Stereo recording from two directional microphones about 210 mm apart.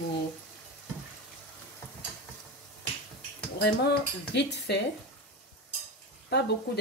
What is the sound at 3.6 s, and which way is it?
Speech, 55° left (ahead or behind).